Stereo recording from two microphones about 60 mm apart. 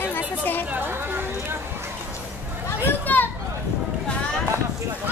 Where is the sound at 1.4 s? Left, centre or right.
Right.